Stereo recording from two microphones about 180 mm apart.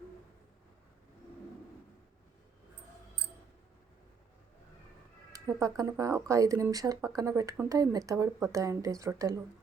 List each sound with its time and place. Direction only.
5.3 s speech: 20° right (ahead or behind)